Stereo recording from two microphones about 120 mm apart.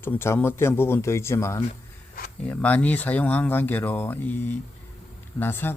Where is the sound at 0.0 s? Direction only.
20° left (ahead or behind).